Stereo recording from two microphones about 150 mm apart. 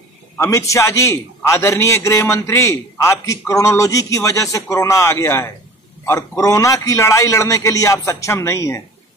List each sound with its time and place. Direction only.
0.4 s a man's voice: 20° left (ahead or behind)